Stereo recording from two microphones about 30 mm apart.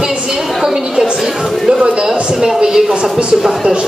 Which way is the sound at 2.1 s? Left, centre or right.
Centre.